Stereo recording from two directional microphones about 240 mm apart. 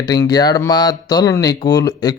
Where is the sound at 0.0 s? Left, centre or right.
Centre.